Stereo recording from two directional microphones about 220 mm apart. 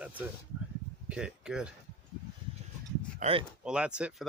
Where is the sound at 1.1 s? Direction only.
5° right (ahead or behind).